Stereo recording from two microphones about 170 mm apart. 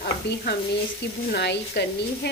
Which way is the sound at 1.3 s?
75° left (ahead or behind).